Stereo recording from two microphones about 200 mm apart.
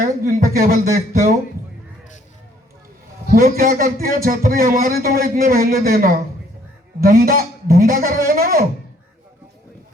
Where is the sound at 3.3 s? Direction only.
45° right (ahead or behind).